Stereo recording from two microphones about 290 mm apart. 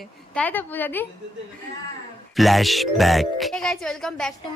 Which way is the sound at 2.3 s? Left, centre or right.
Centre.